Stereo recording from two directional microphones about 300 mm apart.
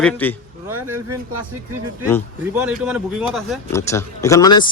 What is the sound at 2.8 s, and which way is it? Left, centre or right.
Speech, centre.